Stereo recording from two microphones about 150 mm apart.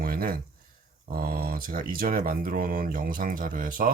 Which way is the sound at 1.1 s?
85° right.